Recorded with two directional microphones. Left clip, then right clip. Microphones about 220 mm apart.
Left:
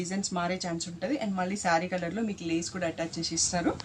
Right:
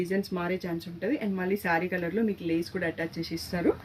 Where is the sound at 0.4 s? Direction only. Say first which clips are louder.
Even; 15° left (ahead or behind).